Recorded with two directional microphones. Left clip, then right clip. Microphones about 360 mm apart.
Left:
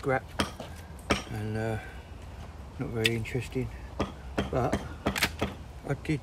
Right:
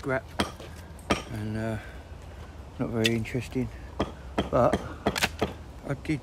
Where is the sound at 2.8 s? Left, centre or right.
Centre.